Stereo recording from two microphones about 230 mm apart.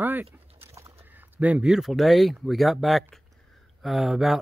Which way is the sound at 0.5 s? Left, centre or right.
Right.